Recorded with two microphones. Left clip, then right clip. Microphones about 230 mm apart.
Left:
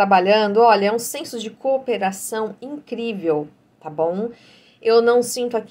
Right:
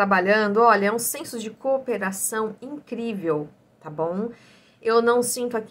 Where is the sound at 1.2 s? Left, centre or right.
Centre.